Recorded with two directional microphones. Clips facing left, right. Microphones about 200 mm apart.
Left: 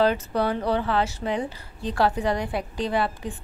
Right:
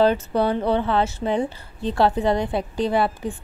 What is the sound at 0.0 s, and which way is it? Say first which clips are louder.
A woman's voice: right 3 dB; 25° right (ahead or behind).